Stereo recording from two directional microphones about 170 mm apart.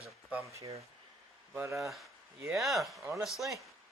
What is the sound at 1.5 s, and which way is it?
Speech, 15° right (ahead or behind).